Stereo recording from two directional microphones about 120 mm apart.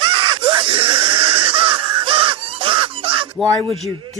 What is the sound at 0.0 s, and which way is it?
Screaming, 45° right (ahead or behind).